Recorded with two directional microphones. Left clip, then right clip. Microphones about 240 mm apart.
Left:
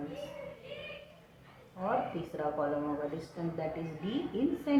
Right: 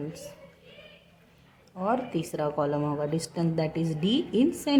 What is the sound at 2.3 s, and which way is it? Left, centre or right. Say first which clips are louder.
A woman's voice: right 5 dB; right.